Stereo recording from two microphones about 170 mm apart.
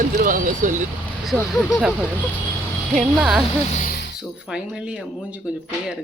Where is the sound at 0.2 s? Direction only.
50° right (ahead or behind).